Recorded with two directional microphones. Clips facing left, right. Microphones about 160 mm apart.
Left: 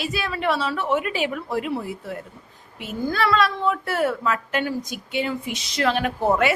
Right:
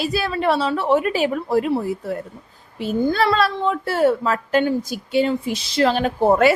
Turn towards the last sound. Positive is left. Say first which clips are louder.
# right 5 dB
turn(degrees=-35)  # may be behind; listen again after turning